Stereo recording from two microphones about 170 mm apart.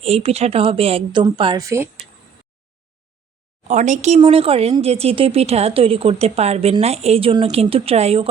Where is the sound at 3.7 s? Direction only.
45° right (ahead or behind).